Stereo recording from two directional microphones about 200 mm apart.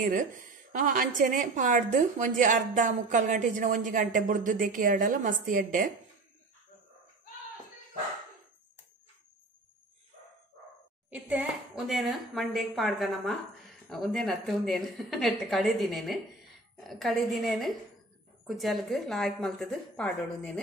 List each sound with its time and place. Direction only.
0.0 s a woman's voice: 40° right (ahead or behind)
11.1 s speech: 10° right (ahead or behind)